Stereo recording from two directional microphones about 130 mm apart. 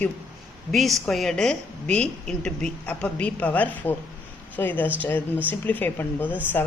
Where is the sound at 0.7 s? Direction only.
Centre (ahead or behind).